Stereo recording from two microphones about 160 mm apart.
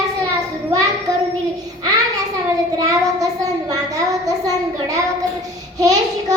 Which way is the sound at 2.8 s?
20° right (ahead or behind).